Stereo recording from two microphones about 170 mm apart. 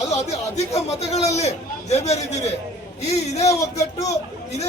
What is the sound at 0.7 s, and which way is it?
Speech, 40° left (ahead or behind).